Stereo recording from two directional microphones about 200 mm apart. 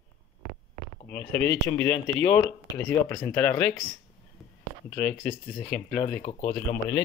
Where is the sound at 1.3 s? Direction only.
60° left (ahead or behind).